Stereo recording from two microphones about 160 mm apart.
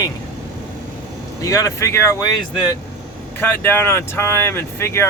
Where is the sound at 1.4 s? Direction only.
20° left (ahead or behind).